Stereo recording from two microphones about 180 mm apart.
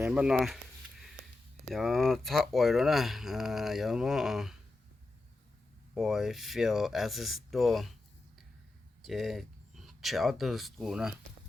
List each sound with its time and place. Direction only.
0.0 s a sound: 5° right (ahead or behind)
1.7 s speech: centre (ahead or behind)
5.9 s speech: centre (ahead or behind)
9.0 s speech: centre (ahead or behind)